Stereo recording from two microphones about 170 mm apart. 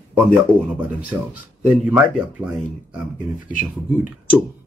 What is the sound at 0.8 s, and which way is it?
Speech, 10° right (ahead or behind).